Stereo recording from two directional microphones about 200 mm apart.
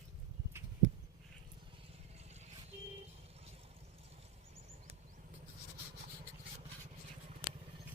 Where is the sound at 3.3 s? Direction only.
30° right (ahead or behind).